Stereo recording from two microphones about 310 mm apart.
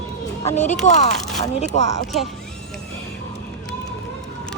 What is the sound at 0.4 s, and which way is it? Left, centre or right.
Speech, left.